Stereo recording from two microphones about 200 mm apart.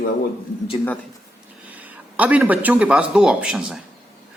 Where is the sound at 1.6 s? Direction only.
10° right (ahead or behind).